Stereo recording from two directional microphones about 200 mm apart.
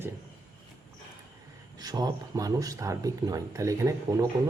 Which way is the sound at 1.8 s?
20° right (ahead or behind).